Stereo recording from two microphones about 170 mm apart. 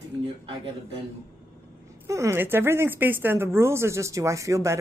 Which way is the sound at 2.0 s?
15° right (ahead or behind).